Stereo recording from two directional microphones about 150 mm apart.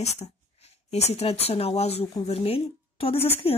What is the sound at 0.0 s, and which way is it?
A woman's voice, 45° left (ahead or behind).